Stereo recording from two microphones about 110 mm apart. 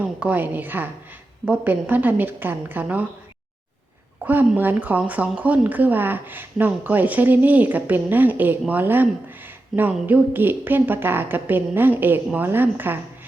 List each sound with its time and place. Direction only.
0.0 s speech: 15° right (ahead or behind)
4.2 s speech: 15° right (ahead or behind)
9.7 s speech: 5° right (ahead or behind)
10.1 s a woman's voice: 15° right (ahead or behind)